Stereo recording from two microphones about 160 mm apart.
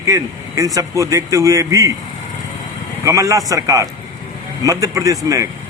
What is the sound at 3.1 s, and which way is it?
A man's voice, 20° right (ahead or behind).